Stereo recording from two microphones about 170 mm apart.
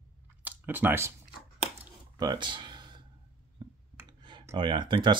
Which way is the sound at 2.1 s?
25° right (ahead or behind).